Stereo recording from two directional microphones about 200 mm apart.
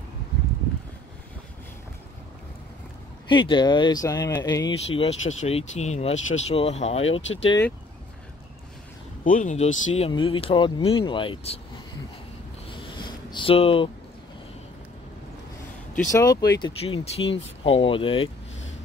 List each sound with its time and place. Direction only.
3.3 s speech: 25° left (ahead or behind)
7.1 s speech: 70° left (ahead or behind)
9.2 s speech: 40° left (ahead or behind)
9.9 s speech: 25° left (ahead or behind)
12.9 s a sound: 25° left (ahead or behind)
16.1 s speech: 15° left (ahead or behind)
16.8 s speech: 30° left (ahead or behind)